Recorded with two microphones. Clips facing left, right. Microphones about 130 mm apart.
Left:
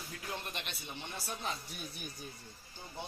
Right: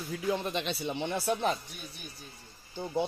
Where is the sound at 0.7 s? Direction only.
90° right; by 1.5 s 65° right (ahead or behind).